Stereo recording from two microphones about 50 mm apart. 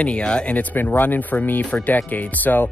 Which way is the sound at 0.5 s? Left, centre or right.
Left.